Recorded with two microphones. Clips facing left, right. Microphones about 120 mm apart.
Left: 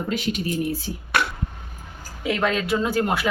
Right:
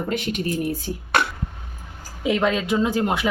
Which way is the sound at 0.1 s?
55° right (ahead or behind).